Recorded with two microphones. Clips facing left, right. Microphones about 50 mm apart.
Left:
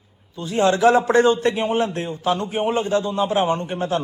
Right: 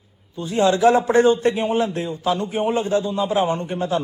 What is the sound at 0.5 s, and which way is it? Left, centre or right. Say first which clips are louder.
A man's voice: even; left.